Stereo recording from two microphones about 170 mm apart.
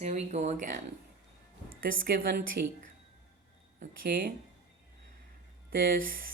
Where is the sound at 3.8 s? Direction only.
60° right (ahead or behind).